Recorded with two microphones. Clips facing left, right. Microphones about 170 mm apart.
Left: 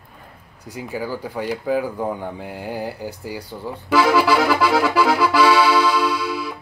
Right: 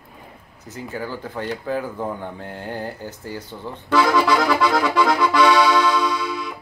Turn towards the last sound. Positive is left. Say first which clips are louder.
# left 2 dB
turn(degrees=5)  # may be behind; listen again after turning